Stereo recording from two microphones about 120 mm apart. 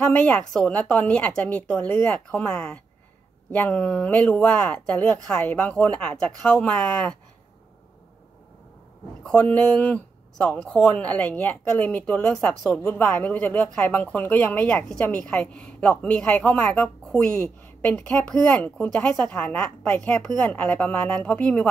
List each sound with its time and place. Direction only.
0.1 s speech: 10° left (ahead or behind)
2.0 s speech: 10° left (ahead or behind)
9.2 s a woman's voice: 10° left (ahead or behind)
19.2 s a woman's voice: 20° left (ahead or behind)
20.0 s speech: 5° left (ahead or behind)